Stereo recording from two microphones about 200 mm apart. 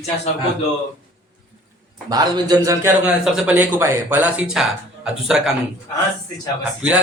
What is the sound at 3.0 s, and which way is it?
Speech, centre (ahead or behind).